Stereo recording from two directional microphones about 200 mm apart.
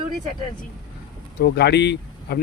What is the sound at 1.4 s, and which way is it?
Speech, 55° left (ahead or behind).